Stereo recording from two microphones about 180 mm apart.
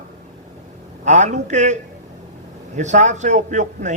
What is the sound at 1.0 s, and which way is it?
Speech, 40° right (ahead or behind).